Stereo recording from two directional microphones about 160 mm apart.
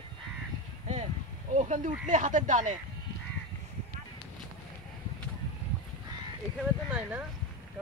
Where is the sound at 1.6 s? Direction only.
55° right (ahead or behind).